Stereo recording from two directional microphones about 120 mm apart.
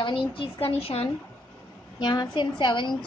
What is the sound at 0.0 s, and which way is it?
A woman's voice, 45° left (ahead or behind).